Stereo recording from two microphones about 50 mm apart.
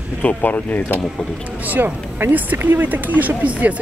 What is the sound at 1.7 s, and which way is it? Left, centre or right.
A woman's voice, right.